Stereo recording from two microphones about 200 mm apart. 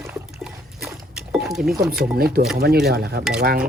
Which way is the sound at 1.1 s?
Centre (ahead or behind).